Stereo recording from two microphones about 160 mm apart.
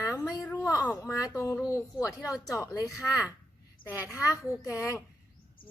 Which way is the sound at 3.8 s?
60° left (ahead or behind).